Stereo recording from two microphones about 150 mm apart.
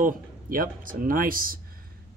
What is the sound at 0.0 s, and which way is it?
Speech, 70° right (ahead or behind).